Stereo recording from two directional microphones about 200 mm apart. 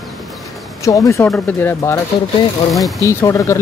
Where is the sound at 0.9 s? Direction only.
15° left (ahead or behind).